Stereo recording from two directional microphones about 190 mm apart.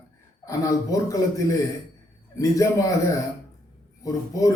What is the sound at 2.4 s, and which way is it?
Speech, 15° left (ahead or behind).